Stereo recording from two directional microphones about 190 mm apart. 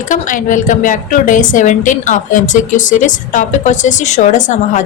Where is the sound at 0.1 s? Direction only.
45° left (ahead or behind).